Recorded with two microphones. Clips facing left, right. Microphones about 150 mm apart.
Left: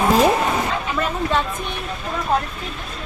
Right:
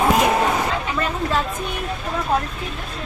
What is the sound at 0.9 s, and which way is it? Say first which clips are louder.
Speech: left 3 dB; centre (ahead or behind).